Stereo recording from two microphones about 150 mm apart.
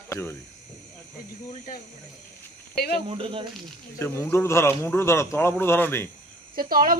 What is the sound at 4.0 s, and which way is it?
A man's voice, 15° left (ahead or behind).